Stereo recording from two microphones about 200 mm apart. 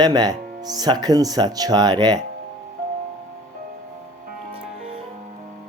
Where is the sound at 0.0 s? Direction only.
20° right (ahead or behind).